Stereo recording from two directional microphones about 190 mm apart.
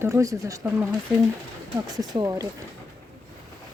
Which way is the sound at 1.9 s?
20° right (ahead or behind).